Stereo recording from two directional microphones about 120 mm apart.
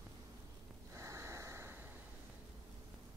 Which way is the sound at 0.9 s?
25° right (ahead or behind).